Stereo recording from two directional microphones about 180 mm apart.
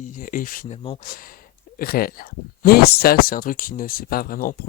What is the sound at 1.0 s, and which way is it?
Speech, 55° left (ahead or behind).